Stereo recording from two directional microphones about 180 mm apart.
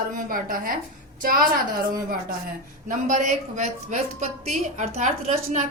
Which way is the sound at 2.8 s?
45° right (ahead or behind).